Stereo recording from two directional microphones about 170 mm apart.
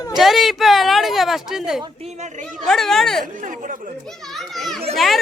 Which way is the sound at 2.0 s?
45° right (ahead or behind).